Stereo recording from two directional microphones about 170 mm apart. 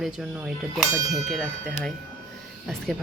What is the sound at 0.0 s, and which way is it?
Speech, 5° right (ahead or behind).